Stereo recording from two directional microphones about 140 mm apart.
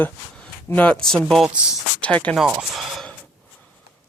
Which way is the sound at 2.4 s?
5° right (ahead or behind).